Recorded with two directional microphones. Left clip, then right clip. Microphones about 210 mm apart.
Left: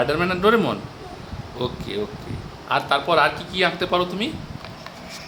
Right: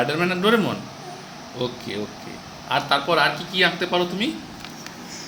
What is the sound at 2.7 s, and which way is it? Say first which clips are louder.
Speech: left 1 dB; 10° left (ahead or behind).